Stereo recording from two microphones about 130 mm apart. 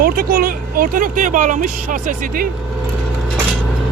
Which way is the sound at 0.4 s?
90° right.